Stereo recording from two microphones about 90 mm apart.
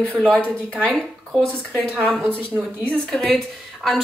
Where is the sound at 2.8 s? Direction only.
10° left (ahead or behind).